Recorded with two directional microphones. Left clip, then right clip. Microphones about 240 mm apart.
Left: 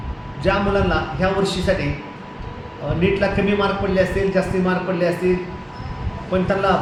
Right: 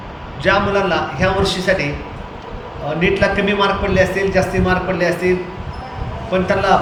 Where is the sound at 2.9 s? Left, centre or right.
Centre.